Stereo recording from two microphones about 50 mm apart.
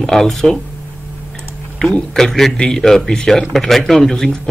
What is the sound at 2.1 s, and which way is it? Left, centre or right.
Speech, centre.